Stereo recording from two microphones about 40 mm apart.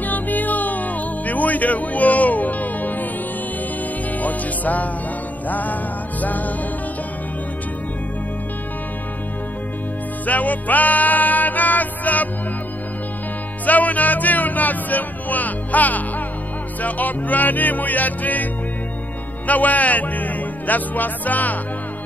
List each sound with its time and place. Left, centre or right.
0.0 s music: left
4.2 s music: left
5.5 s speech: left
10.2 s music: left
13.7 s speech: left